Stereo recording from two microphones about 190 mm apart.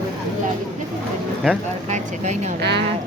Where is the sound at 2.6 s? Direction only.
60° right (ahead or behind).